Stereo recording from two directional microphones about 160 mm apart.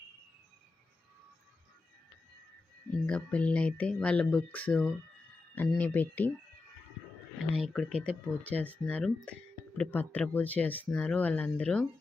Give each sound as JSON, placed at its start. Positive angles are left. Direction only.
{"t": 3.1, "sound": "speech", "side_deg": 10}
{"t": 7.5, "sound": "speech", "side_deg": 0}